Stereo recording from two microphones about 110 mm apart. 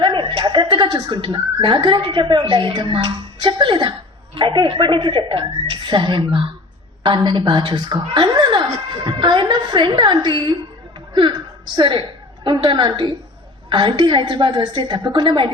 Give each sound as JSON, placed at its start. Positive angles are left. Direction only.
{"t": 0.0, "sound": "a woman's voice", "side_deg": -45}
{"t": 9.0, "sound": "music", "side_deg": -45}
{"t": 11.1, "sound": "a sound", "side_deg": -45}
{"t": 11.8, "sound": "a woman's voice", "side_deg": -45}